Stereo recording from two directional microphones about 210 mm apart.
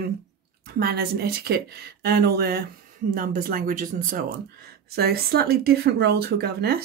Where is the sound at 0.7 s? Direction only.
50° right (ahead or behind).